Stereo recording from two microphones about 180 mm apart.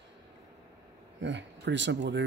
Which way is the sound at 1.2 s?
80° right.